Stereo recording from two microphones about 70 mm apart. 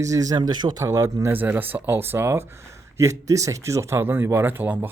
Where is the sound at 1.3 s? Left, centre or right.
Right.